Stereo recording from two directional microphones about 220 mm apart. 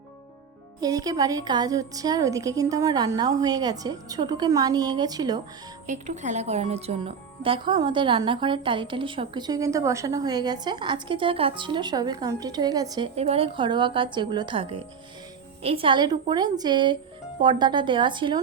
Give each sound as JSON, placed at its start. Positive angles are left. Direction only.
{"t": 0.8, "sound": "a woman's voice", "side_deg": -15}
{"t": 5.8, "sound": "speech", "side_deg": -35}
{"t": 13.1, "sound": "speech", "side_deg": -25}